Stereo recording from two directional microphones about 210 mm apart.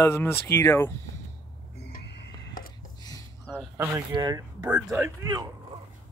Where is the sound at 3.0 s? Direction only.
15° left (ahead or behind).